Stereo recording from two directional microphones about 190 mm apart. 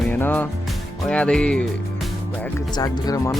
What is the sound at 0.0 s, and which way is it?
Music, 10° left (ahead or behind).